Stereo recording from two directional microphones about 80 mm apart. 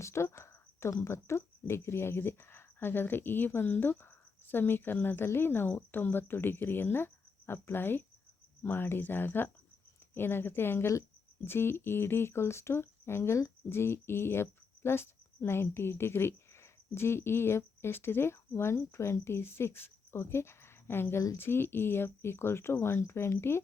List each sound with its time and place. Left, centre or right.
0.0 s speech: left